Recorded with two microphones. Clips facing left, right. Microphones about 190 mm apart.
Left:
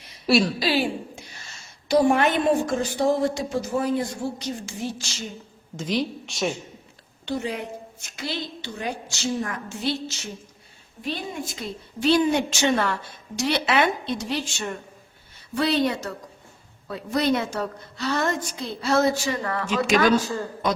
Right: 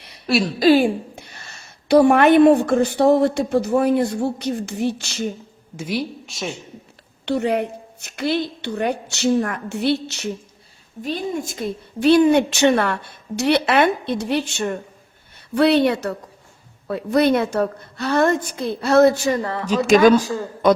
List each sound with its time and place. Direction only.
0.3 s a woman's voice: centre (ahead or behind)
0.6 s a woman's voice: 50° right (ahead or behind)
5.7 s speech: 10° right (ahead or behind)
7.3 s a woman's voice: 70° right (ahead or behind)
11.0 s a woman's voice: 45° right (ahead or behind)
19.6 s speech: 40° right (ahead or behind)